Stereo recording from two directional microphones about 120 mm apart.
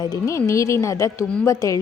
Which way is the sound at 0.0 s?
30° left (ahead or behind).